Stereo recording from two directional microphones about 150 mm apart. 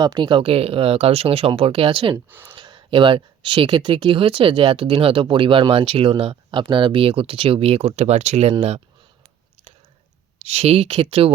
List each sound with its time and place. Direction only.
0.0 s speech: 30° right (ahead or behind)
2.3 s speech: 15° right (ahead or behind)
2.6 s speech: 30° right (ahead or behind)
10.4 s speech: 45° right (ahead or behind)